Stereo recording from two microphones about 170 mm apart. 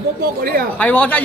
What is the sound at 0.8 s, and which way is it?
Speech, 10° left (ahead or behind).